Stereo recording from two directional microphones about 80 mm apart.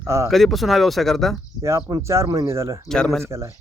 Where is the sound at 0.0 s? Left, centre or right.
Right.